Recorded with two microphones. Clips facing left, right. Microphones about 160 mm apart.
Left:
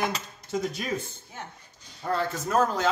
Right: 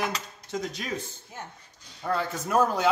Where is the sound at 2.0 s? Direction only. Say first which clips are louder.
Left 1 dB; centre (ahead or behind).